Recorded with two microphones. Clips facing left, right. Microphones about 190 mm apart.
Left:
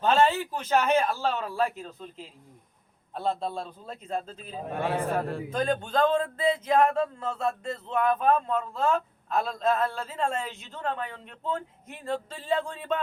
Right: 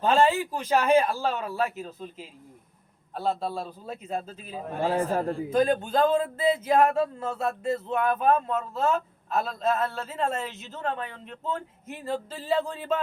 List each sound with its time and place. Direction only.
0.3 s speech: 10° right (ahead or behind)
4.8 s a man's voice: 60° left (ahead or behind)
5.5 s speech: 5° right (ahead or behind)